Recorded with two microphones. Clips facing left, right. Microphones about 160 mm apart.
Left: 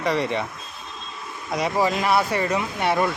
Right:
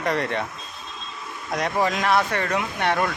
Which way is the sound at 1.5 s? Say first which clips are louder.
Left 1 dB; 5° left (ahead or behind).